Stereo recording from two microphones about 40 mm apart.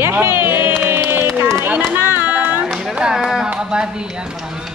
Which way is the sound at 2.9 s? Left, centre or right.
Centre.